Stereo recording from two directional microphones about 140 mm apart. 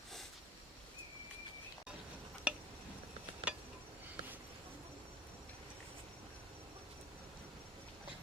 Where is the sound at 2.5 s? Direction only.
10° right (ahead or behind).